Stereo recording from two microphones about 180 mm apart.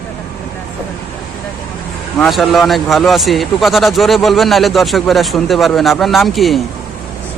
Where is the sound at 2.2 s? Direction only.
Centre (ahead or behind).